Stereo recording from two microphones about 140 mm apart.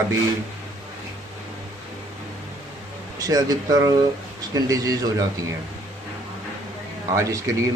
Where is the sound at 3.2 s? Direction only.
25° right (ahead or behind).